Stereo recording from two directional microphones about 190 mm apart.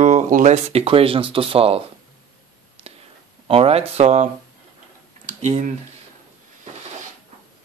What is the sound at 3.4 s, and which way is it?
Speech, 30° right (ahead or behind).